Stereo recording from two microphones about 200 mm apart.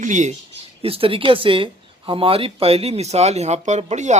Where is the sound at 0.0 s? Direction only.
35° right (ahead or behind).